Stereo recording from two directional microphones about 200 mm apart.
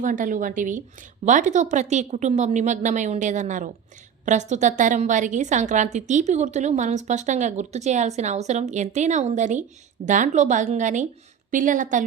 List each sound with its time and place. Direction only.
0.0 s a woman's voice: 40° right (ahead or behind)